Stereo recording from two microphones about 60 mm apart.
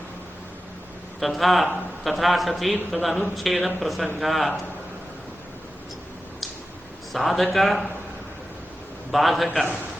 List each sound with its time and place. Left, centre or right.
1.2 s speech: centre
7.1 s speech: centre
9.1 s speech: centre